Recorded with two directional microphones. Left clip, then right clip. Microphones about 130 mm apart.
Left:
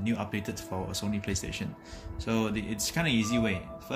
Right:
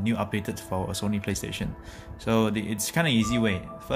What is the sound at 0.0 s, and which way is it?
Speech, 90° right.